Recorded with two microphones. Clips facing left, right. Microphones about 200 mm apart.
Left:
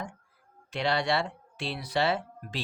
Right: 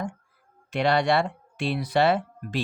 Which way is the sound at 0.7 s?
55° right (ahead or behind).